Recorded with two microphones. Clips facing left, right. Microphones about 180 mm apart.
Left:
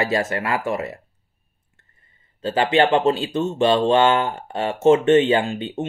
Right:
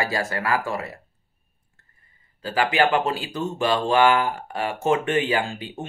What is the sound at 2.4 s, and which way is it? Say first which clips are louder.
Speech: left 4 dB; 25° left (ahead or behind).